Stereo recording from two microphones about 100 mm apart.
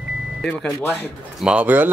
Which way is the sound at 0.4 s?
5° left (ahead or behind).